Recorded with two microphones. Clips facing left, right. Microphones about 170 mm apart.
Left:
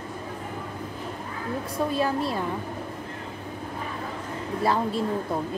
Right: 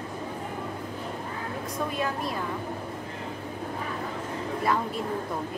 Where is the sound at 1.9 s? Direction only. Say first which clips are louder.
Left 6 dB; 30° left (ahead or behind).